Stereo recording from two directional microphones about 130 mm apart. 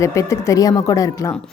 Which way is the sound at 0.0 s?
25° left (ahead or behind).